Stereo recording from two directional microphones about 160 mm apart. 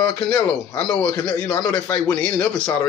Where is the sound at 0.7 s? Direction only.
20° left (ahead or behind).